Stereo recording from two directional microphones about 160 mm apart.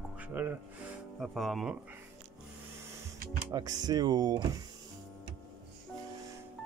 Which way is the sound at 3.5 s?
25° right (ahead or behind).